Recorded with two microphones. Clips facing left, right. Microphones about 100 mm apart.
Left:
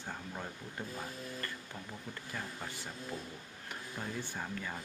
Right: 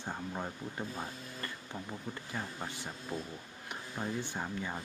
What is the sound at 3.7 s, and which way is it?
Speech, 20° right (ahead or behind).